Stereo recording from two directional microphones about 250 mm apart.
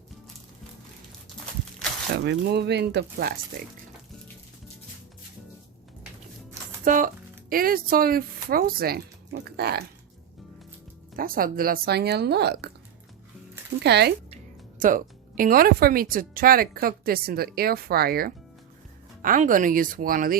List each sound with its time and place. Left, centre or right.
2.2 s speech: right
6.8 s speech: right
11.2 s speech: right
13.8 s speech: right